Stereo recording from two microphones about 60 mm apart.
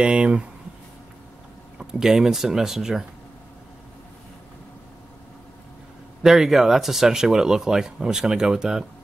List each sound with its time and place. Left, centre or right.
0.0 s speech: centre
1.8 s speech: centre
6.2 s speech: centre